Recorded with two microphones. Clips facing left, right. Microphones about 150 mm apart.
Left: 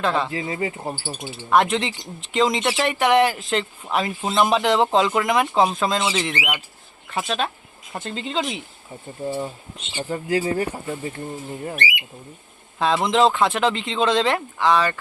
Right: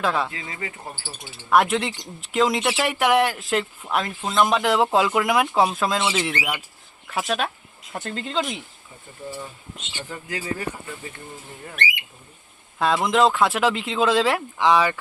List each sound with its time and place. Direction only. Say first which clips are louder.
0.0 s speech: left 1 dB; 5° right (ahead or behind)
0.3 s speech: left 8 dB; 30° left (ahead or behind)
1.5 s speech: even; centre (ahead or behind)
3.8 s speech: left 2 dB; 10° left (ahead or behind)
6.3 s speech: left 1 dB; 10° left (ahead or behind)
7.1 s speech: even; 5° right (ahead or behind)
9.2 s speech: left 8 dB; 35° left (ahead or behind)
12.8 s speech: left 1 dB; centre (ahead or behind)